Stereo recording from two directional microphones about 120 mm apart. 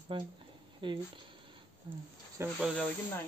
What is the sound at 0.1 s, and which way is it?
Speech, 45° right (ahead or behind).